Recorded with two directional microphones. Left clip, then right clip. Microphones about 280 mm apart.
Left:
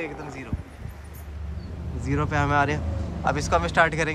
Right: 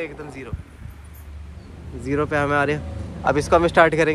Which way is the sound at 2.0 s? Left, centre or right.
Centre.